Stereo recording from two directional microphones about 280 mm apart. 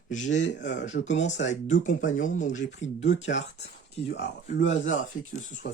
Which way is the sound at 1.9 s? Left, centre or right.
Left.